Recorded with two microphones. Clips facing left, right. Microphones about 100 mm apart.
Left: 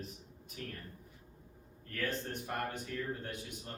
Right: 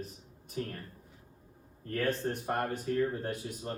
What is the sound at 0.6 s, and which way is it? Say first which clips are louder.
Speech: right 8 dB; 35° right (ahead or behind).